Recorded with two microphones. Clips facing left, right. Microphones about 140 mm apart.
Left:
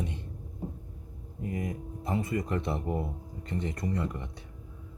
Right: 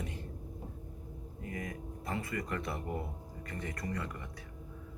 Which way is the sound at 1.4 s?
25° left (ahead or behind).